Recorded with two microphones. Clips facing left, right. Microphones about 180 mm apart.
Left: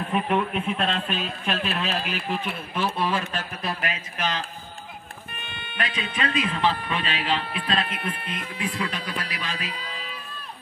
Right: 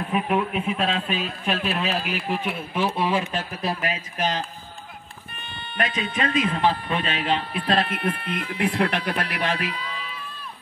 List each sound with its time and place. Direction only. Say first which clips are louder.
0.0 s speech: right 1 dB; 5° right (ahead or behind)
3.6 s a man's voice: right 3 dB; 40° right (ahead or behind)
5.8 s speech: right 3 dB; 45° right (ahead or behind); by 9.8 s 60° right (ahead or behind)